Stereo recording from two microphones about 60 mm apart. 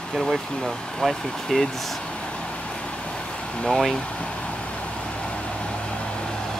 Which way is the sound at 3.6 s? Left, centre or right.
Centre.